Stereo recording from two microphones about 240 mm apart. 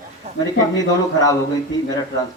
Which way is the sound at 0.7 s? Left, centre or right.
Centre.